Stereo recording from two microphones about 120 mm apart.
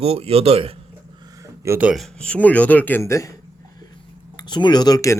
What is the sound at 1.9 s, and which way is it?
Speech, 5° left (ahead or behind).